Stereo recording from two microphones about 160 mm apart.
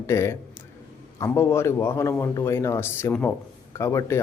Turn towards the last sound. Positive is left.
turn(degrees=15)  # may be behind; listen again after turning